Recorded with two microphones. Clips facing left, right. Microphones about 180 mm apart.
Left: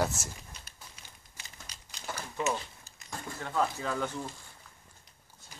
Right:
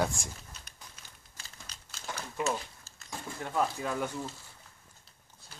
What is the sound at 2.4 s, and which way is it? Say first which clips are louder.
Crumpling: even; 15° left (ahead or behind).